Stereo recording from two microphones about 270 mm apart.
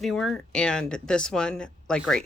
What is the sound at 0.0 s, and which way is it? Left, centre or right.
Speech, centre.